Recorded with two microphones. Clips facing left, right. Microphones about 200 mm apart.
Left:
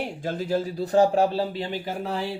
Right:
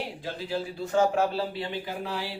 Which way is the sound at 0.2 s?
45° left (ahead or behind).